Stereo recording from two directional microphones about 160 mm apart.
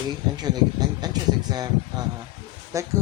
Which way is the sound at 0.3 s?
25° right (ahead or behind).